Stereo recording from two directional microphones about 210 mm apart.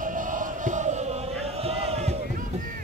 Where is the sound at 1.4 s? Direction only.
30° right (ahead or behind).